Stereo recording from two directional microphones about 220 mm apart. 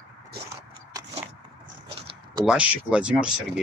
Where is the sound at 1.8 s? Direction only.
20° right (ahead or behind).